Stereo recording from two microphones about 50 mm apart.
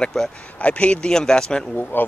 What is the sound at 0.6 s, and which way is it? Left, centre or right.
Speech, left.